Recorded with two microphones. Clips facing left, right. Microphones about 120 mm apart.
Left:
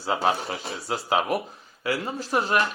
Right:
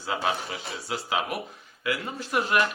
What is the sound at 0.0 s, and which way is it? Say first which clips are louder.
A man's voice: left 4 dB; 30° left (ahead or behind).